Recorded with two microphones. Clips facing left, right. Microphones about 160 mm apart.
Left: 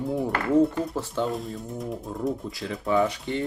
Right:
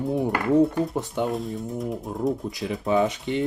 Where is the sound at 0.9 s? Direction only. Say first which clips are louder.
Right 1 dB; 15° right (ahead or behind).